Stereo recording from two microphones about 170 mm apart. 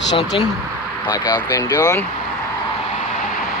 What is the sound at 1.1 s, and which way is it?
Speech, 20° left (ahead or behind).